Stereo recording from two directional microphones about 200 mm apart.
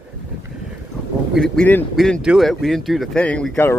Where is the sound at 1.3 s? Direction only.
5° left (ahead or behind).